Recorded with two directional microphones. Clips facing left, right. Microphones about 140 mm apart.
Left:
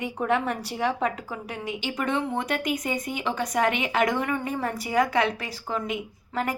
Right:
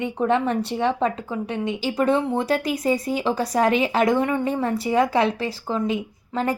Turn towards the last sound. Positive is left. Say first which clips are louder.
# right 4 dB
turn(degrees=-30)  # may be behind; listen again after turning